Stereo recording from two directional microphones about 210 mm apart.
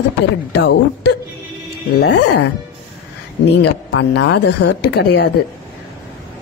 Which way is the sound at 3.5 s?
55° left (ahead or behind).